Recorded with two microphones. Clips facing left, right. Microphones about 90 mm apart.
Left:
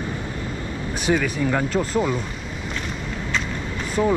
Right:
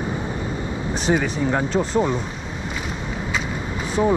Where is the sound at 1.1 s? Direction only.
20° right (ahead or behind).